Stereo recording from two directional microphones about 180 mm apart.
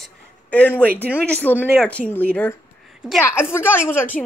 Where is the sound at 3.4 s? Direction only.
15° left (ahead or behind).